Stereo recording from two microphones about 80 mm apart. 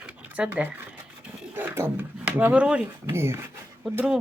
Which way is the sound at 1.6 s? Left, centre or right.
Right.